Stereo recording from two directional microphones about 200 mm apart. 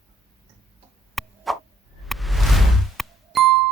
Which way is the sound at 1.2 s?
Centre (ahead or behind).